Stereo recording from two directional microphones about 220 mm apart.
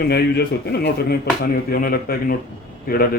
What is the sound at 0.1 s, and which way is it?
A man's voice, 45° left (ahead or behind).